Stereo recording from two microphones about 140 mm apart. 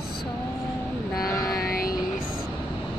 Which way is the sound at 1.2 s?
25° left (ahead or behind).